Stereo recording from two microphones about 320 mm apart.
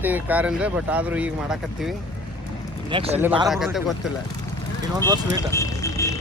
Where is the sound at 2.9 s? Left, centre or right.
Centre.